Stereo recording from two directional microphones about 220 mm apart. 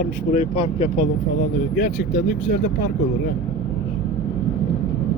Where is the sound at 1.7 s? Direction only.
50° left (ahead or behind).